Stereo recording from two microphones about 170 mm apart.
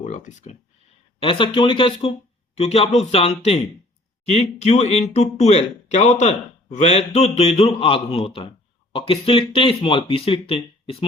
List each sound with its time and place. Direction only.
0.0 s speech: 45° left (ahead or behind)
1.2 s speech: 30° left (ahead or behind)